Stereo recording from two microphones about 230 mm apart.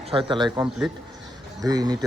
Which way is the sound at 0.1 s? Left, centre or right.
Right.